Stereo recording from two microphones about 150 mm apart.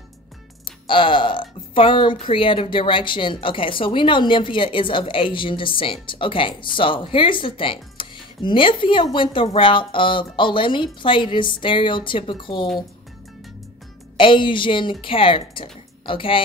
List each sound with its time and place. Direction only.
0.8 s a woman's voice: 35° left (ahead or behind)
14.1 s a woman's voice: 35° left (ahead or behind)